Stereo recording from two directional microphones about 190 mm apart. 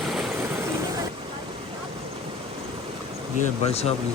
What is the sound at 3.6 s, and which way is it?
Speech, 35° left (ahead or behind).